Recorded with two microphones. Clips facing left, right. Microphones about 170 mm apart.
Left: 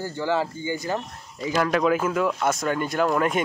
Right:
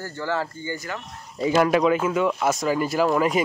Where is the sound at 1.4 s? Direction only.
25° right (ahead or behind).